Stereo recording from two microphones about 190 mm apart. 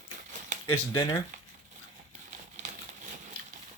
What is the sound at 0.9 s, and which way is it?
Speech, 20° left (ahead or behind).